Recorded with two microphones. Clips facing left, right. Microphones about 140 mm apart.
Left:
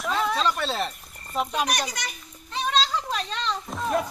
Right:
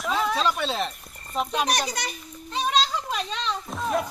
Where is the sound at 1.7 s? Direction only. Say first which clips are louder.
Right 2 dB; 25° right (ahead or behind).